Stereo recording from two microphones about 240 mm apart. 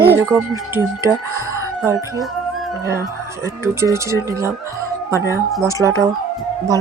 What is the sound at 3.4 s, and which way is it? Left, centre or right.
Speech, centre.